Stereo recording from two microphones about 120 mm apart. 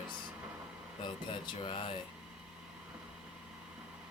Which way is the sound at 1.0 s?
40° left (ahead or behind).